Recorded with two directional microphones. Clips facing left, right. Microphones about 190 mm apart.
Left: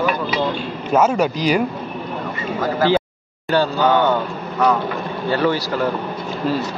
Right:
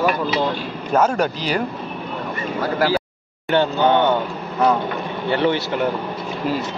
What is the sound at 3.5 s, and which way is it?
Speech, 20° right (ahead or behind).